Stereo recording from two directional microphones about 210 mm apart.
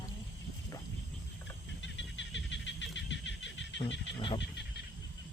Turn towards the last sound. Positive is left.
turn(degrees=25)  # may be behind; listen again after turning